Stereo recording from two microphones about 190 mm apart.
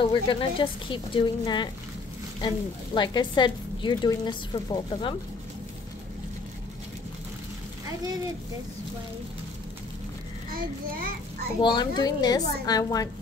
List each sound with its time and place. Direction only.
0.0 s a woman's voice: 25° left (ahead or behind)
10.5 s a child's voice: 50° right (ahead or behind)
11.6 s a woman's voice: 25° left (ahead or behind)